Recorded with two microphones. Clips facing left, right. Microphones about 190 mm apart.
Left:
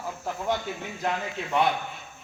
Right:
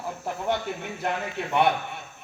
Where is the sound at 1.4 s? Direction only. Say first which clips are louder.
Right 3 dB; 65° right (ahead or behind).